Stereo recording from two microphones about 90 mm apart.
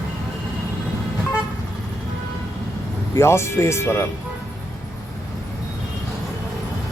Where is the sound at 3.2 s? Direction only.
30° left (ahead or behind).